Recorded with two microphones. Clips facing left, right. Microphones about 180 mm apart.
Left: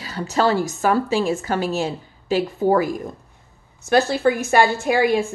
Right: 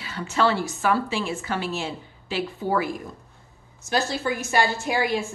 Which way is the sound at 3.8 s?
60° left (ahead or behind).